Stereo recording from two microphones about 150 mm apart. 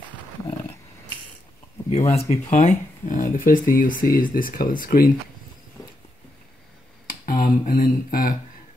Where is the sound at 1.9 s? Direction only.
45° left (ahead or behind); by 5.1 s 75° left (ahead or behind).